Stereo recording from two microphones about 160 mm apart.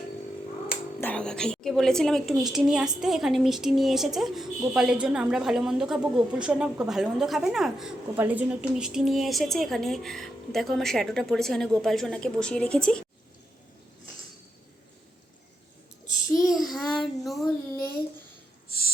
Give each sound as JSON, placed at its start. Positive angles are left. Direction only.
{"t": 1.0, "sound": "a woman's voice", "side_deg": 5}
{"t": 16.3, "sound": "child singing", "side_deg": 0}
{"t": 18.7, "sound": "a sound", "side_deg": 75}